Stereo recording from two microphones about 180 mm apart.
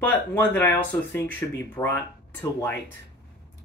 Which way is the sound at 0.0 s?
10° left (ahead or behind).